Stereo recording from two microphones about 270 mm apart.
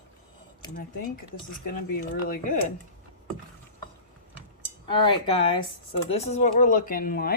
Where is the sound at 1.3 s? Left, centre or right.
Left.